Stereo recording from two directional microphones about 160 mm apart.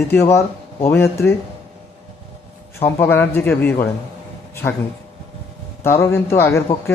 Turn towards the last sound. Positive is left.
turn(degrees=15)  # may be behind; listen again after turning